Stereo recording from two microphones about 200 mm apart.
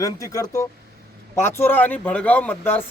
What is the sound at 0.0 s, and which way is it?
Speech, 15° left (ahead or behind).